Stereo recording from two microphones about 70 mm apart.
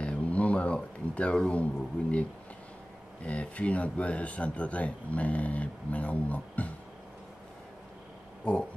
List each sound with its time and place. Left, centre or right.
0.0 s a sound: centre
1.1 s speech: centre
3.3 s speech: centre
8.5 s speech: centre